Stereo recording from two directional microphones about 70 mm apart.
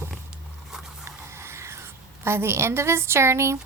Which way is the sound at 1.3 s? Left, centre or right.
Right.